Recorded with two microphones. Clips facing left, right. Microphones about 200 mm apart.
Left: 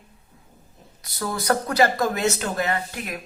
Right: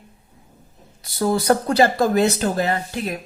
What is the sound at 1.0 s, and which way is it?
Speech, 30° right (ahead or behind).